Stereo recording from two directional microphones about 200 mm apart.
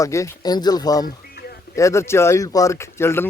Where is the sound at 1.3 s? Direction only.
50° left (ahead or behind).